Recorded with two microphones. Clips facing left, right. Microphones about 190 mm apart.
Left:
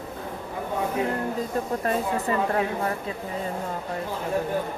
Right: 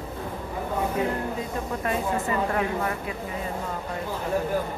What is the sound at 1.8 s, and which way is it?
A woman's voice, 35° left (ahead or behind).